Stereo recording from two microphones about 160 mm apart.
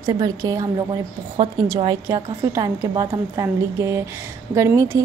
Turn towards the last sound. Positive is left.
turn(degrees=-20)  # may be behind; listen again after turning